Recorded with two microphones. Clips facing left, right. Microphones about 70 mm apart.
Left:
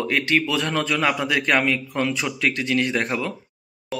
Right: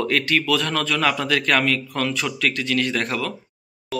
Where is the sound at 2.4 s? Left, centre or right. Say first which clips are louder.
Left 1 dB; left.